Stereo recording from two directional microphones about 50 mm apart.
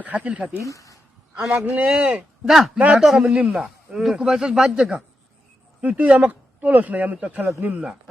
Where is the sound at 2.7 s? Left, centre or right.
Right.